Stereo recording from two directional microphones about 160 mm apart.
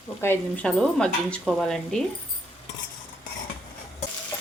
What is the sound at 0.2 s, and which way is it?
Speech, 10° left (ahead or behind).